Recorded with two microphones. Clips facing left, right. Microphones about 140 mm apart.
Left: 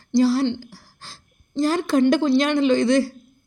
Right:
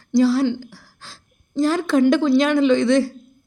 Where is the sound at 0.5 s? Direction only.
30° left (ahead or behind).